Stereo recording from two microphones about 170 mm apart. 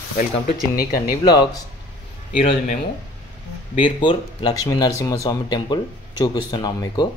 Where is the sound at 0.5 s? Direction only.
60° left (ahead or behind).